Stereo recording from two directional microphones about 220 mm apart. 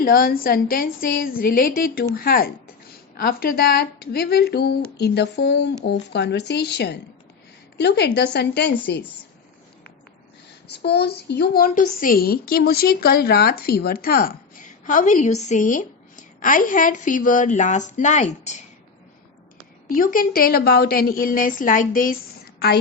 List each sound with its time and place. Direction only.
0.0 s a woman's voice: 40° left (ahead or behind)
10.7 s a woman's voice: 50° left (ahead or behind); by 18.5 s 30° left (ahead or behind)
19.9 s a woman's voice: 40° left (ahead or behind)